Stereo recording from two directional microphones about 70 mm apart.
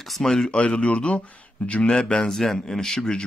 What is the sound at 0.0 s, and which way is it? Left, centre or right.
A man's voice, centre.